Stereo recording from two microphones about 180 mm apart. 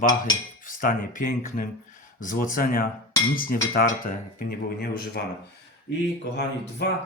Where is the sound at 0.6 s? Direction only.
50° left (ahead or behind).